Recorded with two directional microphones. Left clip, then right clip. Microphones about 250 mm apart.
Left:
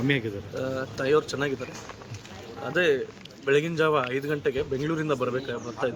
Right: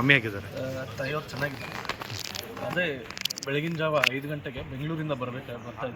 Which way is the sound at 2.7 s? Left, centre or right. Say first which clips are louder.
Left 7 dB; centre.